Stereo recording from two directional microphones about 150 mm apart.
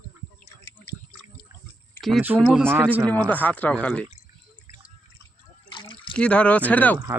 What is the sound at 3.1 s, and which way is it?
Speech, 10° left (ahead or behind).